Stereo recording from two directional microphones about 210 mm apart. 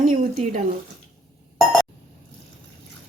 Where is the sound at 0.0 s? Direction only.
35° right (ahead or behind).